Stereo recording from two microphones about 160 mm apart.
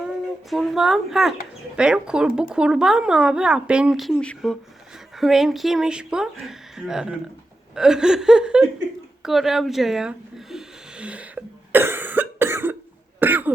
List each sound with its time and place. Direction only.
0.5 s a woman's voice: centre (ahead or behind)
9.2 s a sound: centre (ahead or behind)
13.1 s cough: 10° right (ahead or behind)